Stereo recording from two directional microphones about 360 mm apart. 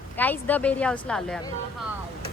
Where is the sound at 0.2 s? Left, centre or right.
Centre.